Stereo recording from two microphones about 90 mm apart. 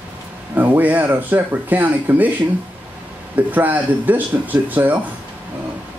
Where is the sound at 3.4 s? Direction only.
20° right (ahead or behind).